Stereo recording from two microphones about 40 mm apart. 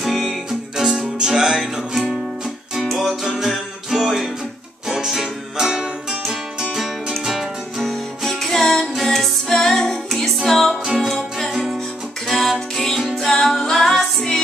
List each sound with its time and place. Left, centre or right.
0.0 s music: centre
7.8 s music: centre